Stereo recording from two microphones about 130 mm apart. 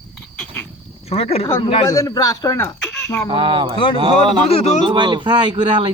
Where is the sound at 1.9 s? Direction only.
25° left (ahead or behind).